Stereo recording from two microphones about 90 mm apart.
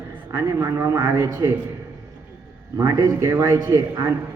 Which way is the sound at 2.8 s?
45° right (ahead or behind).